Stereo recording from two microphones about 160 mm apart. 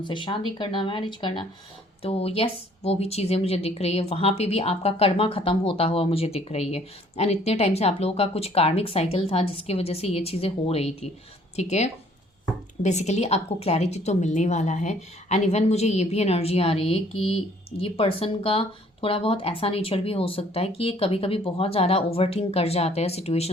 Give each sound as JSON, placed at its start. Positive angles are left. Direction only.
{"t": 0.0, "sound": "a woman's voice", "side_deg": 30}